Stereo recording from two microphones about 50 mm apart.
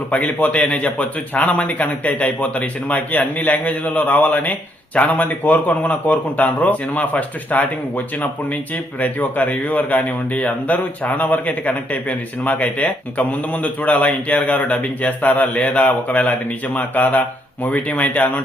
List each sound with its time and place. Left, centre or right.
0.1 s a man's voice: left